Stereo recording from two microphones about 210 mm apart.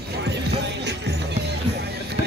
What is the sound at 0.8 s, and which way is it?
Music, 55° right (ahead or behind).